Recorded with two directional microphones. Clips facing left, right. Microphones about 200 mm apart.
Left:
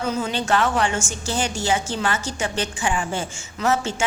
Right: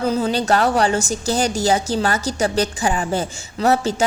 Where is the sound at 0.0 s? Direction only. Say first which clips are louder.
Right 5 dB; 35° right (ahead or behind).